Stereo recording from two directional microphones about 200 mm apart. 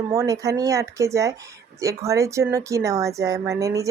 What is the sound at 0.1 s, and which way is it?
Speech, 15° right (ahead or behind).